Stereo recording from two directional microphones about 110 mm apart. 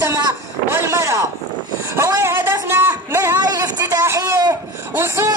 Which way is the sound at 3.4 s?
35° right (ahead or behind).